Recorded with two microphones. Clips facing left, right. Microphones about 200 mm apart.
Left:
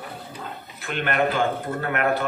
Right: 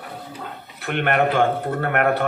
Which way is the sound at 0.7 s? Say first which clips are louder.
Right 4 dB; 60° right (ahead or behind).